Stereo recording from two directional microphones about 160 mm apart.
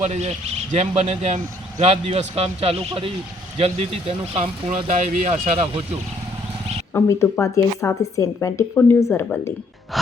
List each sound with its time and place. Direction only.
0.0 s a man's voice: 45° right (ahead or behind)
4.9 s speech: 55° right (ahead or behind)
6.9 s a woman's voice: 15° left (ahead or behind)